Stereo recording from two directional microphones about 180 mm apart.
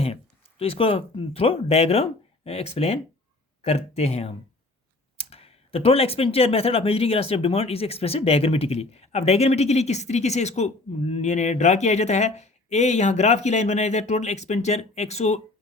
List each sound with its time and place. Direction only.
0.6 s speech: 30° left (ahead or behind)